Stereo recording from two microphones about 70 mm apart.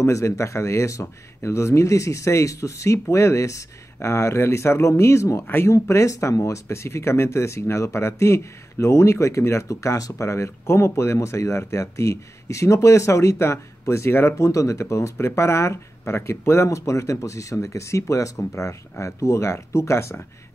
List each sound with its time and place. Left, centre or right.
0.0 s speech: left
14.5 s speech: left